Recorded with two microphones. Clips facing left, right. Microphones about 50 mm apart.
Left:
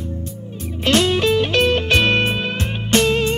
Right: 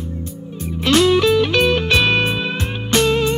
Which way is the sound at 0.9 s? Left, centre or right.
Centre.